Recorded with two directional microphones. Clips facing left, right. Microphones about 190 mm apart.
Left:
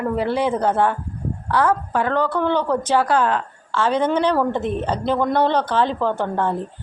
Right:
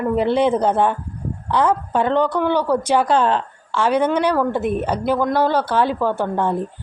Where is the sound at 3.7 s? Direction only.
15° right (ahead or behind).